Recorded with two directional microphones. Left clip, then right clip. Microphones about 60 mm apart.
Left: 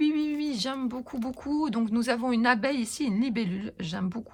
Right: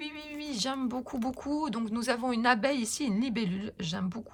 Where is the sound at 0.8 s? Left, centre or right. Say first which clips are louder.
Even; right.